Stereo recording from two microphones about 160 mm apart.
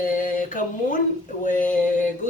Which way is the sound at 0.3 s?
55° left (ahead or behind).